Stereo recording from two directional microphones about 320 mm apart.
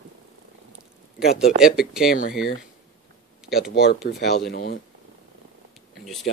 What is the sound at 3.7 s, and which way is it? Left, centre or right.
Speech, left.